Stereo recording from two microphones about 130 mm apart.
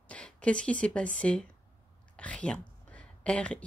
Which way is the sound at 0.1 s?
10° left (ahead or behind).